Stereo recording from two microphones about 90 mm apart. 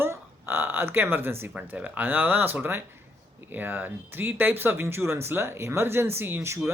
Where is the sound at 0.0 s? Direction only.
25° right (ahead or behind).